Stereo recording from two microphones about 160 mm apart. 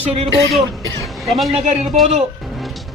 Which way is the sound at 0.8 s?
20° left (ahead or behind).